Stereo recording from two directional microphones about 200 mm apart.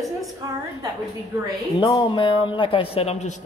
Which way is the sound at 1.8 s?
20° left (ahead or behind).